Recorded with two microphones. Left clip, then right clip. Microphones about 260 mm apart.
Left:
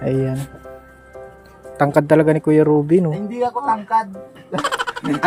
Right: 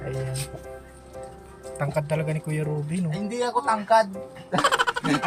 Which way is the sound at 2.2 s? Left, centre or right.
Centre.